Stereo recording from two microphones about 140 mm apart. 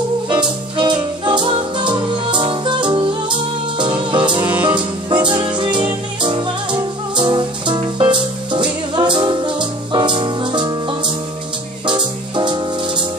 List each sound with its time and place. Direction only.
0.3 s music: 35° right (ahead or behind)